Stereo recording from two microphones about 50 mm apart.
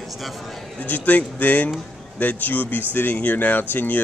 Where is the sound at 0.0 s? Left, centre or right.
Centre.